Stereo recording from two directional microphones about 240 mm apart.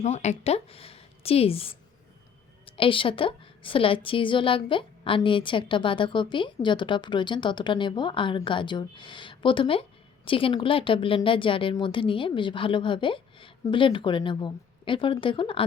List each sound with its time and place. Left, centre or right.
0.0 s a woman's voice: left